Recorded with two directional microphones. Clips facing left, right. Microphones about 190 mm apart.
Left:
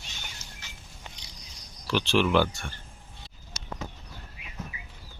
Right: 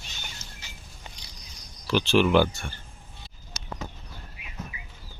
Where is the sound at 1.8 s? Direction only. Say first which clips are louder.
Right 3 dB; centre (ahead or behind).